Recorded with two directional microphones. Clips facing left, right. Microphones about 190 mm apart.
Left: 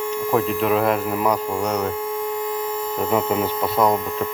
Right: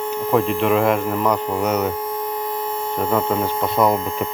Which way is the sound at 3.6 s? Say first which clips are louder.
Right 2 dB; centre (ahead or behind).